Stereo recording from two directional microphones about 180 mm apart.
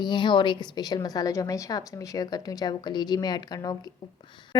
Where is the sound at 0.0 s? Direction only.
25° left (ahead or behind).